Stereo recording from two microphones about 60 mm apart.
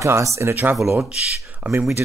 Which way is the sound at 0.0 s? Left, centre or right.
Right.